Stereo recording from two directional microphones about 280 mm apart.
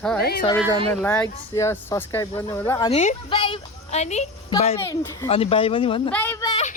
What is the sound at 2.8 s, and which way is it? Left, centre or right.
A woman's voice, left.